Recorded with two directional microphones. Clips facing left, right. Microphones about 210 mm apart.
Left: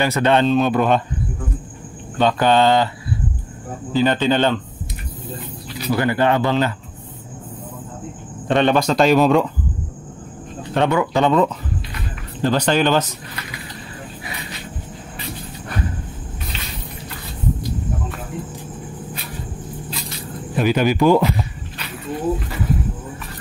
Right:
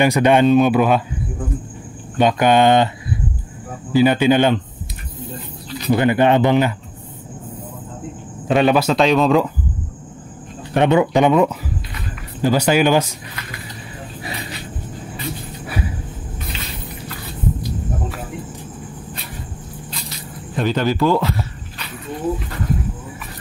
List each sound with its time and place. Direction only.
0.0 s speech: 15° right (ahead or behind)
2.1 s speech: 15° right (ahead or behind)
3.9 s speech: 10° right (ahead or behind)
5.9 s speech: 20° right (ahead or behind)
8.5 s speech: 5° right (ahead or behind)
10.7 s speech: 20° right (ahead or behind)
20.5 s speech: 10° left (ahead or behind)